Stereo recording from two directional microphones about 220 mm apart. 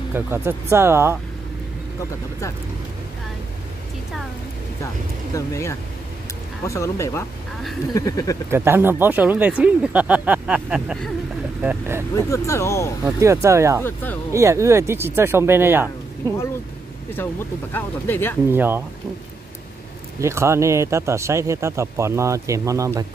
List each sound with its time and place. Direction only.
0.1 s a man's voice: 10° right (ahead or behind)
5.3 s speech: 15° left (ahead or behind)
8.5 s a man's voice: 10° right (ahead or behind)
12.3 s speech: 15° left (ahead or behind)
13.0 s a man's voice: 15° right (ahead or behind)
17.2 s speech: 10° left (ahead or behind)
18.5 s a man's voice: 10° right (ahead or behind)
20.2 s a man's voice: 10° right (ahead or behind)